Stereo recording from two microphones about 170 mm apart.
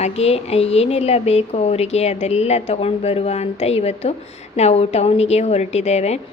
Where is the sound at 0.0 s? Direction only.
40° left (ahead or behind).